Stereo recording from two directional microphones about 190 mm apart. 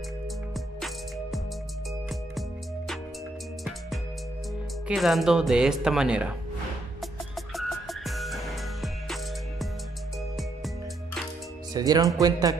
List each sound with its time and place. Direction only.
0.7 s music: centre (ahead or behind)
4.8 s speech: centre (ahead or behind)
7.0 s music: centre (ahead or behind)
11.7 s speech: 20° right (ahead or behind)